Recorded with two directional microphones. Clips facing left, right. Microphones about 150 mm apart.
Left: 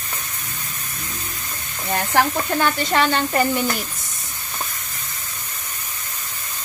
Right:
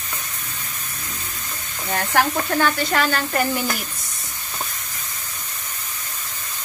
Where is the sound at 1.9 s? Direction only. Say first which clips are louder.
Left 1 dB; 15° left (ahead or behind).